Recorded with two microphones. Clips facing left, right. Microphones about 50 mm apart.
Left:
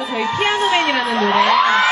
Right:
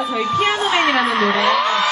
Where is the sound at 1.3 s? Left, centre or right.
Left.